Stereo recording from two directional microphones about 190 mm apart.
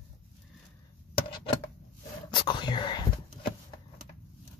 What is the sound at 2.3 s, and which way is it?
Whispering, 25° left (ahead or behind).